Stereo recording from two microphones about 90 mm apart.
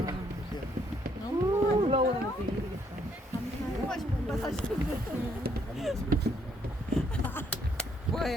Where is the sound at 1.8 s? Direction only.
75° right (ahead or behind).